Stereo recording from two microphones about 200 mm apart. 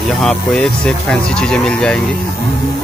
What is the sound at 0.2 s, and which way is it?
Speech, 5° left (ahead or behind).